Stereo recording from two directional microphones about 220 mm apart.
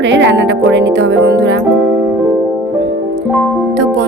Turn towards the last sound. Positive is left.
turn(degrees=-55)  # may be behind; listen again after turning